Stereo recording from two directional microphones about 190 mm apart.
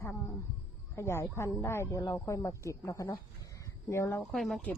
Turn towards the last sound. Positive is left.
turn(degrees=0)  # may be behind; listen again after turning